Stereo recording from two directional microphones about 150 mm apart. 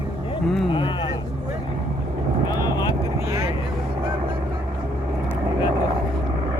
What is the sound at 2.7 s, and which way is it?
Vehicle, 25° left (ahead or behind).